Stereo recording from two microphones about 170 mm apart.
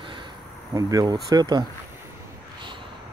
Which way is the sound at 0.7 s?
20° right (ahead or behind).